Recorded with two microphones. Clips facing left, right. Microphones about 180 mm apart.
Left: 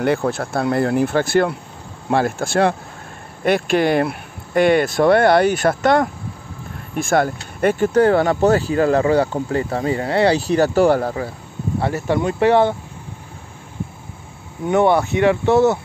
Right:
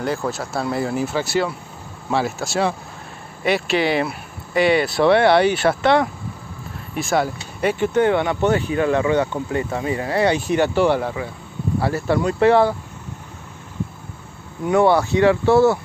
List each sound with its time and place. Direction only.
0.0 s speech: 60° left (ahead or behind)
7.6 s speech: 40° left (ahead or behind)
12.1 s speech: 20° left (ahead or behind)
14.6 s speech: 20° left (ahead or behind)